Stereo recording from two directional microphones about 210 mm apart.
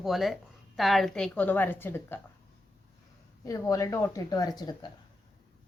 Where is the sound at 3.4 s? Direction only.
15° left (ahead or behind).